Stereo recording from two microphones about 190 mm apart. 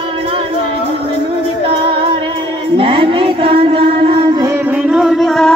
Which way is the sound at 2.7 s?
25° right (ahead or behind).